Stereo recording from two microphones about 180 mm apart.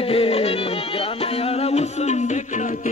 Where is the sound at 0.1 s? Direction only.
35° left (ahead or behind).